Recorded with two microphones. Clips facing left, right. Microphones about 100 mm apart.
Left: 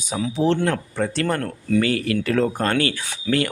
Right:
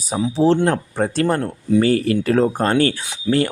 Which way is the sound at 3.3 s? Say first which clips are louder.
Right 3 dB; 15° right (ahead or behind).